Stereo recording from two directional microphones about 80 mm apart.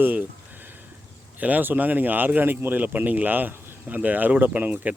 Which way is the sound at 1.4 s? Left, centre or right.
Right.